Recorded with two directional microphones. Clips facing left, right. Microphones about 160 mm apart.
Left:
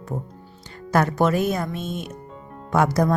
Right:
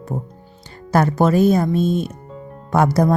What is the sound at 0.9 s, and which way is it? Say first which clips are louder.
Speech: right 4 dB; 35° right (ahead or behind).